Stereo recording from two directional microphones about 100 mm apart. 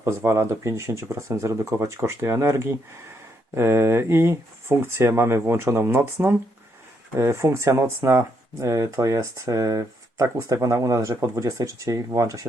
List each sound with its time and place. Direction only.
0.0 s speech: 25° right (ahead or behind)